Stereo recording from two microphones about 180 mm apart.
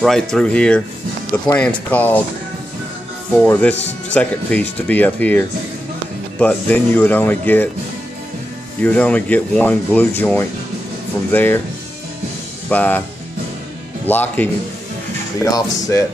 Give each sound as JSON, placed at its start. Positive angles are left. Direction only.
{"t": 0.0, "sound": "speech", "side_deg": 5}
{"t": 3.3, "sound": "speech", "side_deg": 5}
{"t": 6.4, "sound": "speech", "side_deg": 10}
{"t": 8.8, "sound": "speech", "side_deg": 10}
{"t": 12.6, "sound": "speech", "side_deg": 10}
{"t": 14.0, "sound": "speech", "side_deg": 10}